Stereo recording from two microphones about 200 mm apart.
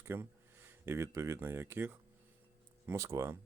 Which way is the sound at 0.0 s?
10° right (ahead or behind).